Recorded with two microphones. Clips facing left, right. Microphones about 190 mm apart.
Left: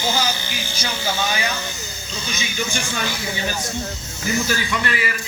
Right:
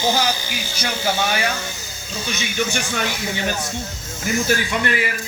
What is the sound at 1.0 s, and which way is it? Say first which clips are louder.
Speech: right 3 dB; 60° right (ahead or behind).